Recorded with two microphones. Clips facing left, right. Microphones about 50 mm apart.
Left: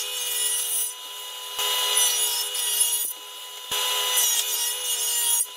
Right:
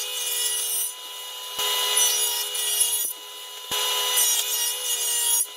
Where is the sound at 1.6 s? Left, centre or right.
Centre.